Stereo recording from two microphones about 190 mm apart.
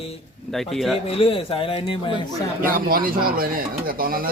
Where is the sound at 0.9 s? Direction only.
30° left (ahead or behind).